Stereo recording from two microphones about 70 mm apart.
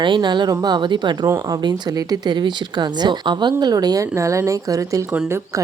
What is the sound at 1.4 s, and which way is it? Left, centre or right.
Speech, right.